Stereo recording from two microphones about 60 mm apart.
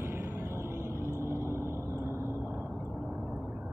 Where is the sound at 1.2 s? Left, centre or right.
Right.